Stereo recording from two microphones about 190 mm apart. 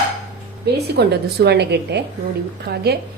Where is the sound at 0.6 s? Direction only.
60° right (ahead or behind).